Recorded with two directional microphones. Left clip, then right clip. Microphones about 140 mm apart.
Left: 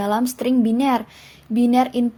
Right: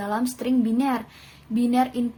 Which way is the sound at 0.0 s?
55° left (ahead or behind).